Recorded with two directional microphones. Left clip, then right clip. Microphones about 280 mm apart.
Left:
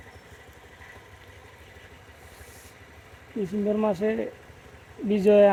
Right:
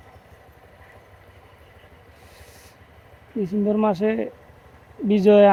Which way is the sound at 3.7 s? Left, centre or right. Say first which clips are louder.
Right 4 dB; right.